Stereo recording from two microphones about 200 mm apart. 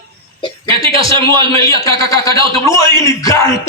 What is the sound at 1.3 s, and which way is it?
A man's voice, 15° left (ahead or behind).